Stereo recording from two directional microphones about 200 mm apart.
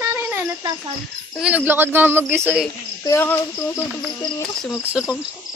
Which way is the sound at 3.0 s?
10° left (ahead or behind).